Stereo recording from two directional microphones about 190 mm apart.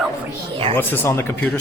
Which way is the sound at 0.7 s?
10° left (ahead or behind).